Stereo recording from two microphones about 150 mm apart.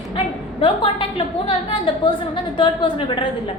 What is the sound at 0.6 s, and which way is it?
A woman's voice, 35° left (ahead or behind).